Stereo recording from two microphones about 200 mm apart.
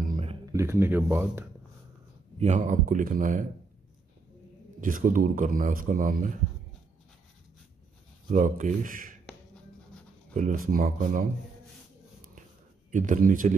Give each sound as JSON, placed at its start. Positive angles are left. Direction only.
{"t": 0.1, "sound": "a sound", "side_deg": -30}
{"t": 0.5, "sound": "speech", "side_deg": -15}
{"t": 2.3, "sound": "speech", "side_deg": -35}
{"t": 4.7, "sound": "a man's voice", "side_deg": -40}
{"t": 8.3, "sound": "speech", "side_deg": -40}
{"t": 10.3, "sound": "a man's voice", "side_deg": -40}
{"t": 12.9, "sound": "speech", "side_deg": -40}